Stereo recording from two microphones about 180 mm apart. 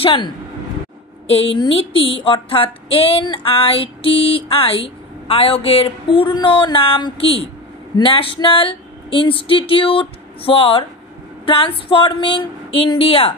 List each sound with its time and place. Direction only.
0.0 s speech: 30° left (ahead or behind)
1.3 s speech: 30° left (ahead or behind)